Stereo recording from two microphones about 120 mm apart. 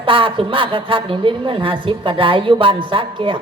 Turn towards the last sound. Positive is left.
turn(degrees=-45)  # may be behind; listen again after turning